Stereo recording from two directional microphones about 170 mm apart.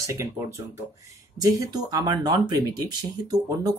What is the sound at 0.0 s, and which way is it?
Speech, 20° right (ahead or behind).